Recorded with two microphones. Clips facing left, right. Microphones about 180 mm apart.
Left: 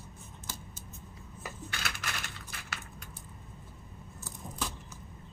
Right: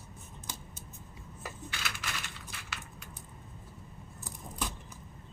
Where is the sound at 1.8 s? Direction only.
50° left (ahead or behind).